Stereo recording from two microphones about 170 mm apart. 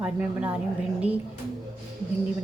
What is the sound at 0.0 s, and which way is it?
A woman's voice, 10° right (ahead or behind).